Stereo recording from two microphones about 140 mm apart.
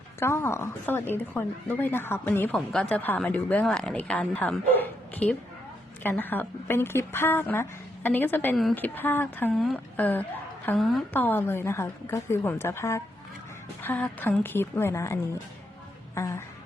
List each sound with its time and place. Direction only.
0.2 s a woman's voice: 20° left (ahead or behind)
10.8 s a woman's voice: centre (ahead or behind)
11.1 s a woman's voice: 15° left (ahead or behind)